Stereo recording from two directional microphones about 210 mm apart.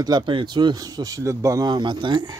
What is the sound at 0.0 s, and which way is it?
Speech, 20° right (ahead or behind).